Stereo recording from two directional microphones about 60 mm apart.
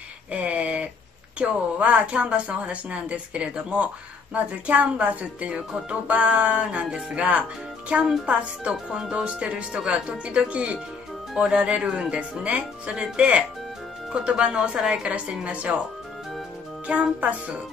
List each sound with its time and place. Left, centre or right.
0.3 s a sound: right
1.4 s a woman's voice: right
8.7 s speech: centre
9.1 s a woman's voice: centre
17.2 s a woman's voice: right